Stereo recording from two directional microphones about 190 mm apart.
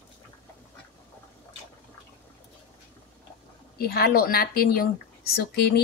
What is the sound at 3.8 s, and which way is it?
Speech, 55° left (ahead or behind).